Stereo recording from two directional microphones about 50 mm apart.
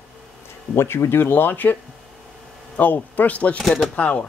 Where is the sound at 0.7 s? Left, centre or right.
Left.